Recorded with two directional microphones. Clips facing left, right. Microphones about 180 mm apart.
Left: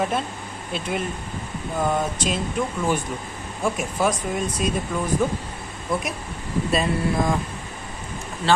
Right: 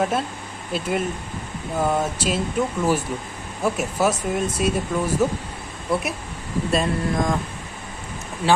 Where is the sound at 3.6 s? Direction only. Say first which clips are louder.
Right 2 dB; 5° right (ahead or behind).